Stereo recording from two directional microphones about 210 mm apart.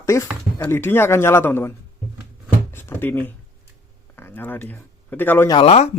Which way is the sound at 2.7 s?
10° left (ahead or behind).